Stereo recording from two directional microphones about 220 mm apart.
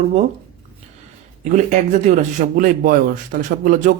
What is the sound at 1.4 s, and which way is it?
Speech, 30° right (ahead or behind).